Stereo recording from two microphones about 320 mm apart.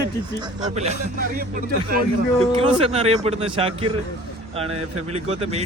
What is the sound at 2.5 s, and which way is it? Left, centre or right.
Speech, centre.